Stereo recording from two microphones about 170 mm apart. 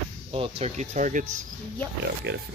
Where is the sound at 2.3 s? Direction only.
90° right.